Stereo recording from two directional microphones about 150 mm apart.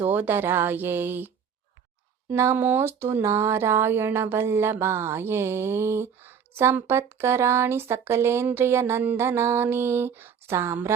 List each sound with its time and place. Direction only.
0.0 s speech: 15° right (ahead or behind)
2.3 s speech: 15° right (ahead or behind)